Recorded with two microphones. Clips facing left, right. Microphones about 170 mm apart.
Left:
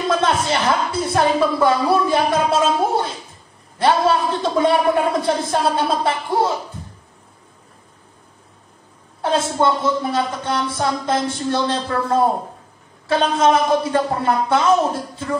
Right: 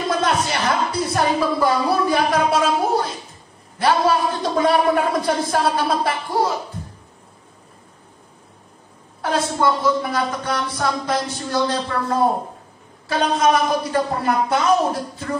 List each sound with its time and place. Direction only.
0.1 s a sound: 25° left (ahead or behind)
3.7 s speech: 25° left (ahead or behind)
9.2 s speech: 25° left (ahead or behind)
13.4 s speech: 25° left (ahead or behind)